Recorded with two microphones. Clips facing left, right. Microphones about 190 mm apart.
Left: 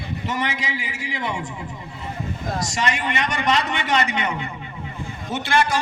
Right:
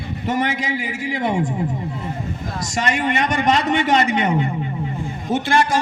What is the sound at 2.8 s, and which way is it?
A man's voice, 50° right (ahead or behind).